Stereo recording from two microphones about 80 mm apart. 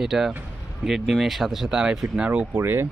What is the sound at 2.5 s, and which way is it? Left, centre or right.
Speech, right.